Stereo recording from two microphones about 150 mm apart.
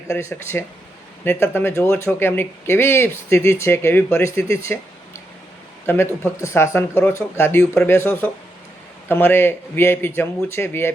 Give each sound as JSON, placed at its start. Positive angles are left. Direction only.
{"t": 0.1, "sound": "speech", "side_deg": 20}
{"t": 5.8, "sound": "speech", "side_deg": 15}